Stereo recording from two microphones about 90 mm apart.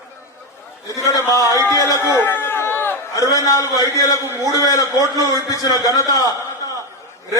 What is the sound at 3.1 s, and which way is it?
A man's voice, 40° left (ahead or behind).